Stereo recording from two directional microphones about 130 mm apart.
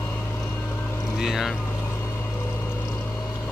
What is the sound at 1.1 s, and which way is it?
Speech, 5° right (ahead or behind).